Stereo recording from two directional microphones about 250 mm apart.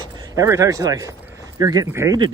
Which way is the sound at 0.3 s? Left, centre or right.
Centre.